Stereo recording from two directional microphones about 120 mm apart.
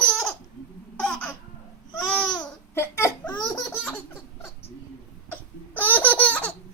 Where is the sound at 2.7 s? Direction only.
20° left (ahead or behind).